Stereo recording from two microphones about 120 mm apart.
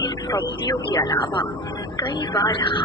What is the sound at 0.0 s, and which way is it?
Speech, 35° left (ahead or behind).